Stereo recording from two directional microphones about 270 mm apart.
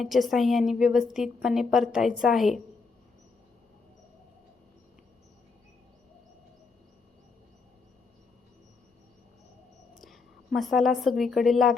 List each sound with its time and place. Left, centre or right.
0.0 s a woman's voice: centre
10.0 s a woman's voice: centre